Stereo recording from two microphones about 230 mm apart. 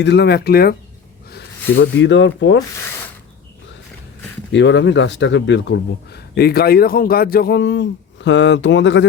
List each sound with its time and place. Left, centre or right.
0.0 s speech: left
1.8 s speech: left
4.5 s speech: left